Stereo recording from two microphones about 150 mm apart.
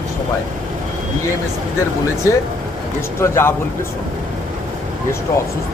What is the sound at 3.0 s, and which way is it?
Speech, 15° left (ahead or behind).